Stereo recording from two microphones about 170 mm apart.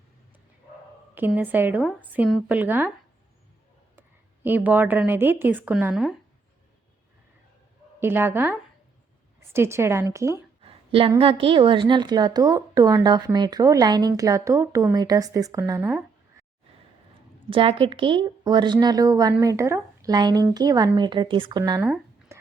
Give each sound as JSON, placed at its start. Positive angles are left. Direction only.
{"t": 1.4, "sound": "speech", "side_deg": -10}
{"t": 4.4, "sound": "speech", "side_deg": -10}
{"t": 7.9, "sound": "speech", "side_deg": -15}
{"t": 10.6, "sound": "a sound", "side_deg": -35}
{"t": 11.2, "sound": "a woman's voice", "side_deg": -30}
{"t": 17.5, "sound": "a woman's voice", "side_deg": -30}
{"t": 21.6, "sound": "speech", "side_deg": -15}
{"t": 22.3, "sound": "whispering", "side_deg": -15}